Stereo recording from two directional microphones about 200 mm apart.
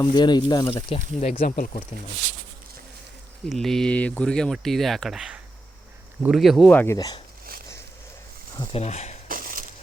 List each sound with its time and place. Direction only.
0.0 s speech: 20° left (ahead or behind)
1.2 s speech: 40° left (ahead or behind)
3.5 s speech: centre (ahead or behind); by 7.2 s 20° left (ahead or behind)
8.5 s speech: 30° left (ahead or behind)
9.3 s crushing: 45° right (ahead or behind)